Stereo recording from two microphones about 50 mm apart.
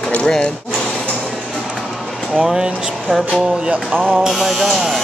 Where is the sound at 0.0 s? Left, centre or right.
Left.